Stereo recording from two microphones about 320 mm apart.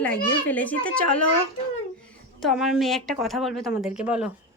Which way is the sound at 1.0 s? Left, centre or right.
Left.